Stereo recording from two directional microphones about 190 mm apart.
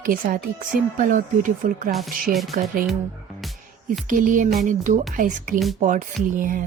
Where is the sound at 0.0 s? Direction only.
45° right (ahead or behind).